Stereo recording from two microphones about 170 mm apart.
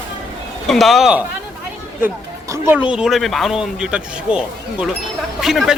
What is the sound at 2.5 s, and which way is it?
Speech, 10° right (ahead or behind).